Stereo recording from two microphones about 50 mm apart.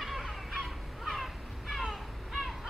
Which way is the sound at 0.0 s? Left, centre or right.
Centre.